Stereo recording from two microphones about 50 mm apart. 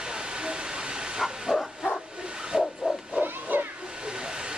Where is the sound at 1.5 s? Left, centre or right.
Centre.